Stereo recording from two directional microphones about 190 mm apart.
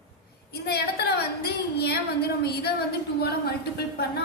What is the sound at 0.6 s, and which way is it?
A woman's voice, 55° left (ahead or behind).